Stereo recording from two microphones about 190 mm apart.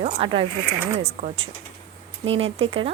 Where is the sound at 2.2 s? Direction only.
30° right (ahead or behind).